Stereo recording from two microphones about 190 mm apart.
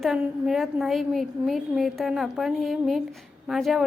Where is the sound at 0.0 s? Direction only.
Centre (ahead or behind).